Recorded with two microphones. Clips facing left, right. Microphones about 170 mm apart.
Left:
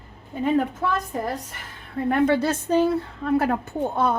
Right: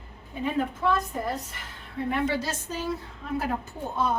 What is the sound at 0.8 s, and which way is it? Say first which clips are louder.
Speech: even; 60° left (ahead or behind).